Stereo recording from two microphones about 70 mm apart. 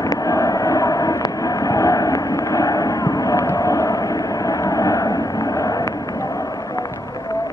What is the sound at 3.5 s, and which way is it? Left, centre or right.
Vehicle, left.